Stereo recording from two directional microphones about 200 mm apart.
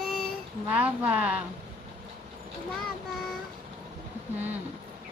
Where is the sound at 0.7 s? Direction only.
5° right (ahead or behind).